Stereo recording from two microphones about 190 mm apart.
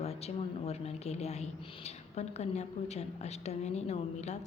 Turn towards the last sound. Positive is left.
turn(degrees=35)  # may be behind; listen again after turning